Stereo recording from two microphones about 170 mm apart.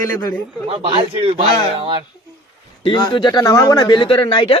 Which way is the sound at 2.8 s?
25° left (ahead or behind).